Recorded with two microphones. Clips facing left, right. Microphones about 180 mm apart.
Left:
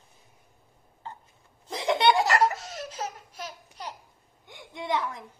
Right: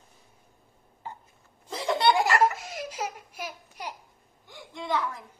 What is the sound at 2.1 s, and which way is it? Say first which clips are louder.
Baby laughter: even; 10° right (ahead or behind).